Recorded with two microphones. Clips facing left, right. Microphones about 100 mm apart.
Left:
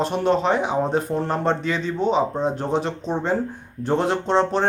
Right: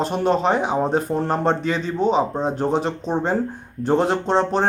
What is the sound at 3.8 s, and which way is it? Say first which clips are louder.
Speech: right 2 dB; 40° right (ahead or behind).